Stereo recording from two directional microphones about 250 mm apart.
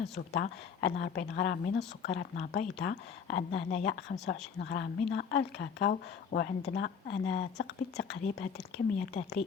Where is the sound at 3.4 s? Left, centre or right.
Left.